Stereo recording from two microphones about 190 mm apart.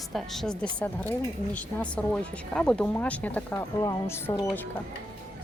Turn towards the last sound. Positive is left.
turn(degrees=15)  # may be behind; listen again after turning